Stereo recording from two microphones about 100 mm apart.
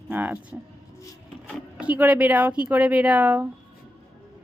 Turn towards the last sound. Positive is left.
turn(degrees=-15)  # may be behind; listen again after turning